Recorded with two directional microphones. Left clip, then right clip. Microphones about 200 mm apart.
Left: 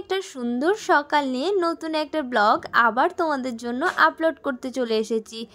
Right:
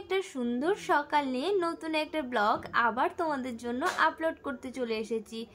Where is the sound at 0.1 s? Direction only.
30° left (ahead or behind).